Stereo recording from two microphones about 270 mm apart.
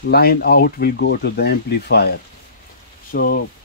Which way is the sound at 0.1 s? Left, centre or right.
Left.